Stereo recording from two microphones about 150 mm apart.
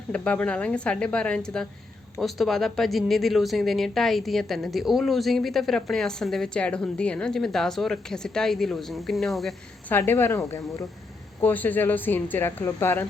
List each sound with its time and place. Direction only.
0.1 s speech: 10° left (ahead or behind)
9.9 s speech: 15° left (ahead or behind)